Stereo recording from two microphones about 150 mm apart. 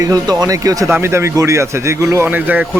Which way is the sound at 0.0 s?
25° right (ahead or behind).